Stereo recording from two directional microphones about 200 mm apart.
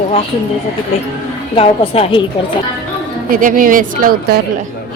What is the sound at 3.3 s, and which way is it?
Speech, 40° right (ahead or behind).